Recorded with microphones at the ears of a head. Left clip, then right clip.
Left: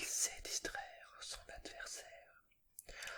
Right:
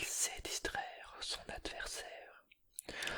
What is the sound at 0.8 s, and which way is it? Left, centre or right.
Whispering, right.